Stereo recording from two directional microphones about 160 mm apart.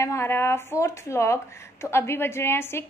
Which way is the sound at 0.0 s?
15° left (ahead or behind).